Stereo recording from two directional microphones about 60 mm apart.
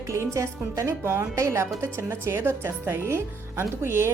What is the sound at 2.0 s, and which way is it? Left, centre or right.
A woman's voice, right.